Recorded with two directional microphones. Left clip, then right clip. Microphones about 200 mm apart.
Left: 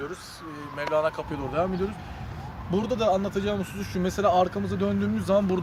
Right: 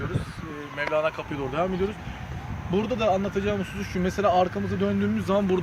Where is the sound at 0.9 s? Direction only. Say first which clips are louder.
Left 1 dB; 15° left (ahead or behind).